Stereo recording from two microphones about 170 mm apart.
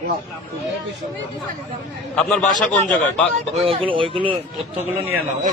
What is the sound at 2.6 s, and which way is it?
Speech, 5° left (ahead or behind).